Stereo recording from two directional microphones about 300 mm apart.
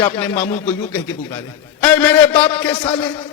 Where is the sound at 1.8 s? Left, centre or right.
Centre.